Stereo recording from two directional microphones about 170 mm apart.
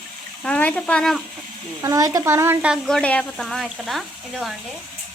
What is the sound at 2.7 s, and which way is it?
Speech, 5° left (ahead or behind).